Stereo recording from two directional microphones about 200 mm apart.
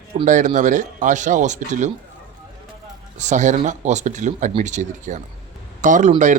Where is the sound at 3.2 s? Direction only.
35° right (ahead or behind).